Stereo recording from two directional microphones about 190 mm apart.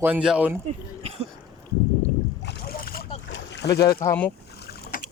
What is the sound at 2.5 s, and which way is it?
Boat, 50° left (ahead or behind).